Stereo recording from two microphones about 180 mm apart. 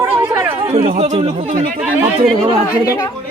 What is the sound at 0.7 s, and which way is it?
Speech, 35° right (ahead or behind).